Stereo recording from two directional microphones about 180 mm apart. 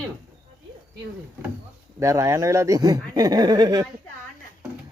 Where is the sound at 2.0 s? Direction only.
15° right (ahead or behind).